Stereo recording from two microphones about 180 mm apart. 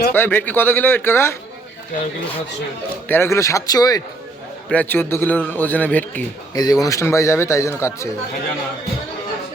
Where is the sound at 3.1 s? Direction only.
15° left (ahead or behind).